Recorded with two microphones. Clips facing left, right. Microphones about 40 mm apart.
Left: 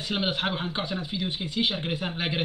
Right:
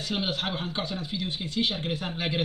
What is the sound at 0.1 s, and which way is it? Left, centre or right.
Speech, centre.